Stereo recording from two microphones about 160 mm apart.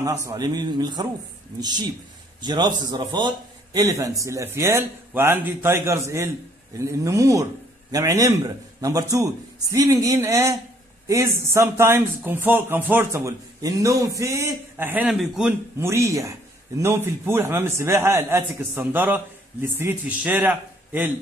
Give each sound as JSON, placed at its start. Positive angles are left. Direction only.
{"t": 0.0, "sound": "a man's voice", "side_deg": -20}
{"t": 15.8, "sound": "a man's voice", "side_deg": -15}